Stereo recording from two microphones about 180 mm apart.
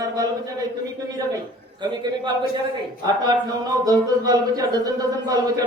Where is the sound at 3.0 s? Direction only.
25° right (ahead or behind).